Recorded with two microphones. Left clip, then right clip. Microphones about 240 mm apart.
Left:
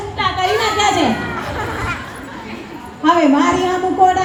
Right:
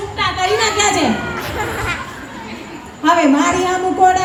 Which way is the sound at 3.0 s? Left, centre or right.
Right.